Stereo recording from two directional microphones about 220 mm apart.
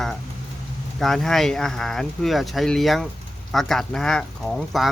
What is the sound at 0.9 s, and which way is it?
Speech, centre (ahead or behind).